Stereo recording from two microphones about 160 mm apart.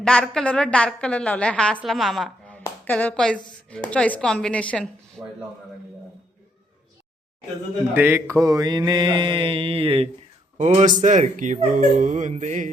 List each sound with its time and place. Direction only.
0.0 s a woman's voice: 5° left (ahead or behind)
7.9 s mantra: 15° right (ahead or behind); by 10.1 s 35° right (ahead or behind)
10.6 s speech: 45° right (ahead or behind)